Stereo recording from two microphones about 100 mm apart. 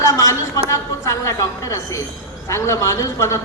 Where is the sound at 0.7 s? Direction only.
30° left (ahead or behind).